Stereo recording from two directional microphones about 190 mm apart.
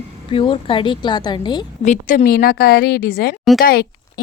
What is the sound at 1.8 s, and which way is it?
Speech, 40° left (ahead or behind).